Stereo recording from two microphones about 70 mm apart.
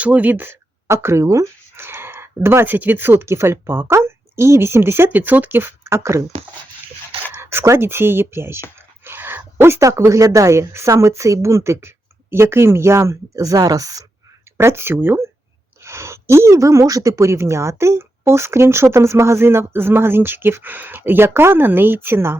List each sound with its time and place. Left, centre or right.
0.0 s speech: right
0.9 s a woman's voice: right
7.3 s a woman's voice: right
14.6 s a woman's voice: right